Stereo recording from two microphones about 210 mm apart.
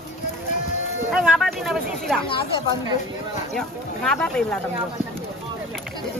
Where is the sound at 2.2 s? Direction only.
25° left (ahead or behind).